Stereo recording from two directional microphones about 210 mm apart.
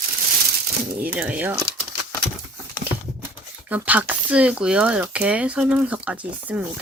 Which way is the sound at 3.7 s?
5° right (ahead or behind).